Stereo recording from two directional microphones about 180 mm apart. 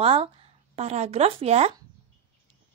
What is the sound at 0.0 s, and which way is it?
A woman's voice, 35° right (ahead or behind).